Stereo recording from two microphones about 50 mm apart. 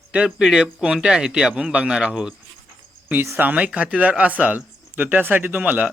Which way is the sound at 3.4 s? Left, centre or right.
Right.